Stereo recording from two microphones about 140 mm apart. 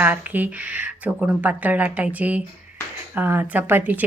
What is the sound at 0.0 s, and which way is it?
Speech, 10° right (ahead or behind).